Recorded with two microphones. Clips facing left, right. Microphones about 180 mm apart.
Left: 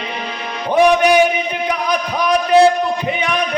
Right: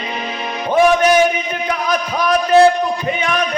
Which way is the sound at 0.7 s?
15° left (ahead or behind).